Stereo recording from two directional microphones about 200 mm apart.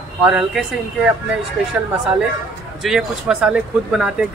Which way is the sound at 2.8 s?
5° right (ahead or behind).